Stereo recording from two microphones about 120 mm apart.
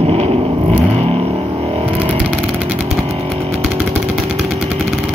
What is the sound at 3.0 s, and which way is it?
Chainsaw, 55° right (ahead or behind).